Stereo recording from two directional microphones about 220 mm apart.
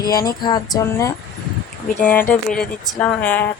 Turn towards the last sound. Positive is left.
turn(degrees=5)  # may be behind; listen again after turning